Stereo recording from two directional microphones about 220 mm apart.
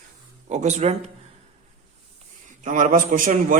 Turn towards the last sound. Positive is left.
turn(degrees=-40)  # may be behind; listen again after turning